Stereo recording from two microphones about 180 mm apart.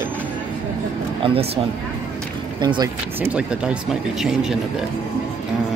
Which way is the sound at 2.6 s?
25° right (ahead or behind).